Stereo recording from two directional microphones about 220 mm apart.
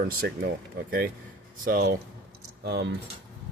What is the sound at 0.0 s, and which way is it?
Speech, 40° right (ahead or behind).